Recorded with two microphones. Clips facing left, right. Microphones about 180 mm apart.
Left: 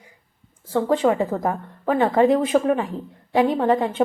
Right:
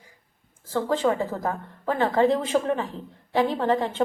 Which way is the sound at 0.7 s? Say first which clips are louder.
Left 4 dB; 20° left (ahead or behind).